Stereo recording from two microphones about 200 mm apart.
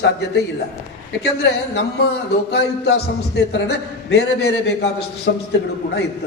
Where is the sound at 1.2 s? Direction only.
60° left (ahead or behind).